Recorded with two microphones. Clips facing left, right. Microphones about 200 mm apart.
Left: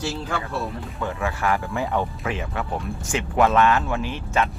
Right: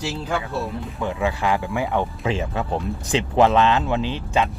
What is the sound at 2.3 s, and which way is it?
Speech, 25° right (ahead or behind).